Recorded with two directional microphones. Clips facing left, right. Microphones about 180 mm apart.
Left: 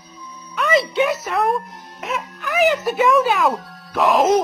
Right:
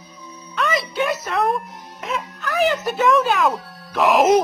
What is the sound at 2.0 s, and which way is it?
Wail, centre (ahead or behind).